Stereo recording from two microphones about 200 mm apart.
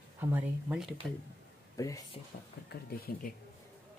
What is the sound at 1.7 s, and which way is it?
Speech, 15° left (ahead or behind).